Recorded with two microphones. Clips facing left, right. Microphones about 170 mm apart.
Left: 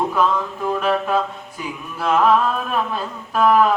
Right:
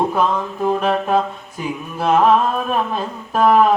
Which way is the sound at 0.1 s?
20° right (ahead or behind).